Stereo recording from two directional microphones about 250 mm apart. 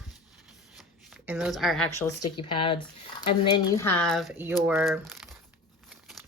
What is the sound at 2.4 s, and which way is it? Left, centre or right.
Speech, centre.